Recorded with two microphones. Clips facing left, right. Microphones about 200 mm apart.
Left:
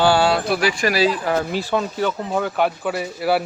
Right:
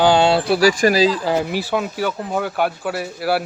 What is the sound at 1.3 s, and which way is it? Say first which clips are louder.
Speech: right 1 dB; 10° right (ahead or behind).